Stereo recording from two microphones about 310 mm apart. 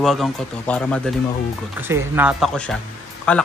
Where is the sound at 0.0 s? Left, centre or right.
Centre.